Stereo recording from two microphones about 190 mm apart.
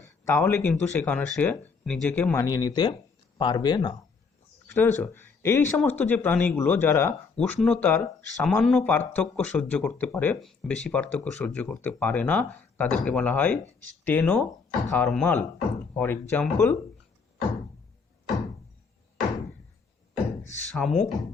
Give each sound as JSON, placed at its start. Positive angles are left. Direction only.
{"t": 0.0, "sound": "speech", "side_deg": 15}
{"t": 4.7, "sound": "speech", "side_deg": 10}
{"t": 20.7, "sound": "speech", "side_deg": 5}